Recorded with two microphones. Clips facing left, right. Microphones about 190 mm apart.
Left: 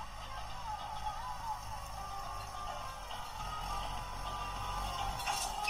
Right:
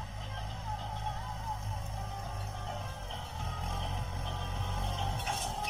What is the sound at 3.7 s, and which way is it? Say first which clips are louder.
Vehicle: right 3 dB; 25° right (ahead or behind).